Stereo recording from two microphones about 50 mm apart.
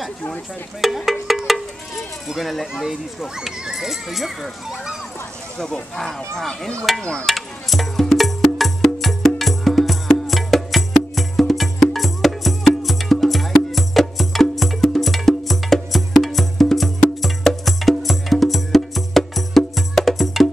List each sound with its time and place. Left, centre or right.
0.7 s speech: centre
2.2 s speech: centre
5.6 s speech: centre
7.0 s speech: centre
7.2 s music: centre